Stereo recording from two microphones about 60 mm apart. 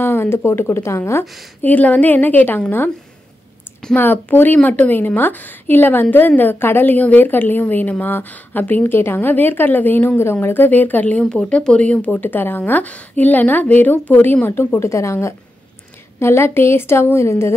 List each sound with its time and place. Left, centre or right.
0.0 s a woman's voice: left
1.2 s a woman's voice: centre
1.6 s speech: left
3.9 s a woman's voice: left
11.2 s speech: centre; by 14.8 s left
14.8 s a woman's voice: left